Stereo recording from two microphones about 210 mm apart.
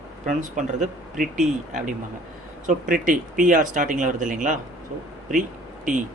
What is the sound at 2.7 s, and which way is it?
Speech, 40° right (ahead or behind).